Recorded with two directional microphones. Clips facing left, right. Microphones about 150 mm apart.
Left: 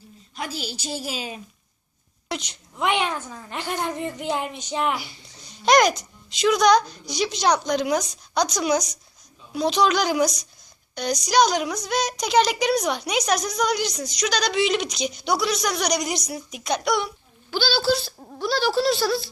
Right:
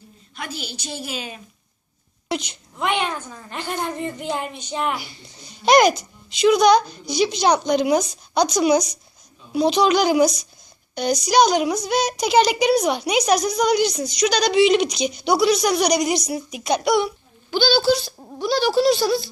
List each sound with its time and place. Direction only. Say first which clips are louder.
0.3 s a woman's voice: left 1 dB; 35° left (ahead or behind)
2.3 s a woman's voice: right 5 dB; centre (ahead or behind); by 4.9 s 15° left (ahead or behind)
5.4 s a child's voice: right 3 dB; centre (ahead or behind)